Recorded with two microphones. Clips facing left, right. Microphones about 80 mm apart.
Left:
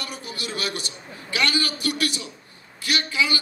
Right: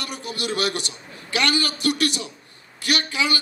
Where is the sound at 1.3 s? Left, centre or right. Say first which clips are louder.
Right 2 dB; right.